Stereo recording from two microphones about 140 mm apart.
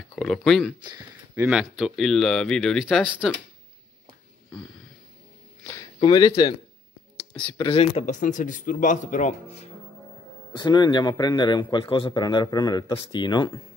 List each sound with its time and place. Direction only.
0.1 s speech: 5° left (ahead or behind)
6.0 s a man's voice: 30° left (ahead or behind)
7.7 s speech: 45° left (ahead or behind)
8.2 s speech: 65° left (ahead or behind)
10.5 s a man's voice: 30° left (ahead or behind)